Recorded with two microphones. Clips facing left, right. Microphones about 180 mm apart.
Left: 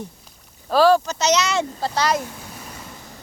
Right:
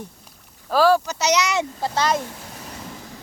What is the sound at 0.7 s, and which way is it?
Speech, 10° right (ahead or behind).